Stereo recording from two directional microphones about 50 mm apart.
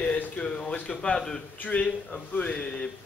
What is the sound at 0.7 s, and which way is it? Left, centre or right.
A man's voice, left.